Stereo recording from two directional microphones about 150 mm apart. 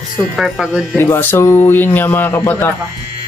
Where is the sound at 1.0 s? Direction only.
15° left (ahead or behind).